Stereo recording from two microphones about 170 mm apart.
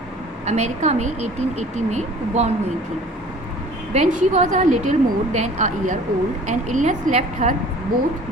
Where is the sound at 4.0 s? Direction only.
40° right (ahead or behind).